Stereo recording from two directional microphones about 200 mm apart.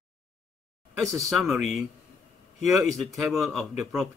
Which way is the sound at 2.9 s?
Centre (ahead or behind).